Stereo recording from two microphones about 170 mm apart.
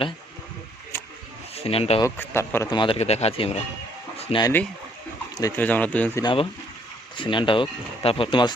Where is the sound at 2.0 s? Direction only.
15° left (ahead or behind).